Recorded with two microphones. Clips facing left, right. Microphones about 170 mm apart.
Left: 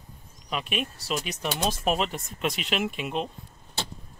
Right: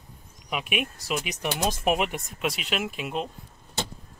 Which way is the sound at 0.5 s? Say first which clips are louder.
Right 1 dB; 10° right (ahead or behind).